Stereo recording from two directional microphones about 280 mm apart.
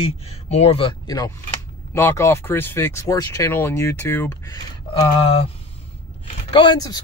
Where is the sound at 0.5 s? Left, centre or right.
Left.